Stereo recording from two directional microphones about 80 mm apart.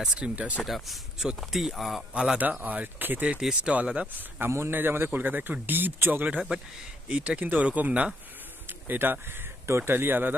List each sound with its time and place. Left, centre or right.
0.0 s speech: centre
0.7 s speech: centre
2.6 s speech: right
4.4 s speech: right